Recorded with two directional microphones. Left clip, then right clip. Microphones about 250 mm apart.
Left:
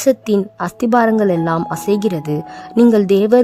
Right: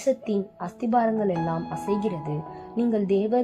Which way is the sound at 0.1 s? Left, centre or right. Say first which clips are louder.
Left 10 dB; left.